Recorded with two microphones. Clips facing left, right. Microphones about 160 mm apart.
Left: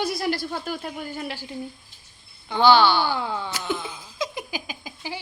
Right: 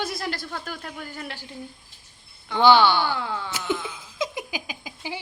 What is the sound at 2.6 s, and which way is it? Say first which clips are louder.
Speech: even; 20° right (ahead or behind).